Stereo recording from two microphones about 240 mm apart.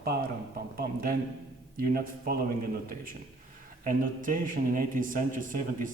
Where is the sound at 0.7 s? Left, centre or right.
Right.